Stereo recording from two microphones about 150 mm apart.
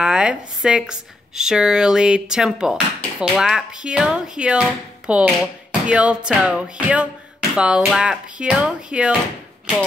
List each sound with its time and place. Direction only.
0.0 s speech: 5° right (ahead or behind)